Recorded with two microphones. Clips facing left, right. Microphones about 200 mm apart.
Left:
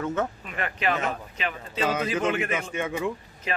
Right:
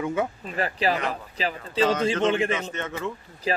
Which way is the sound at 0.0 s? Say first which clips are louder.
Right 1 dB; 10° right (ahead or behind).